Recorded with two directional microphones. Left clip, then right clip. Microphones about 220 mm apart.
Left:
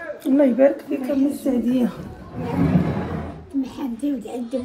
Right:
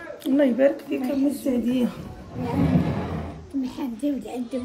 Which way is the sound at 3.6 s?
25° left (ahead or behind).